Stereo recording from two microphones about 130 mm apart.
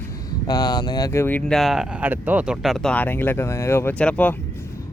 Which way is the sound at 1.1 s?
15° left (ahead or behind).